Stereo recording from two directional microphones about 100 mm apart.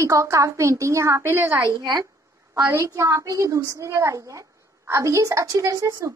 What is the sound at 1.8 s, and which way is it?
Speech, 40° right (ahead or behind).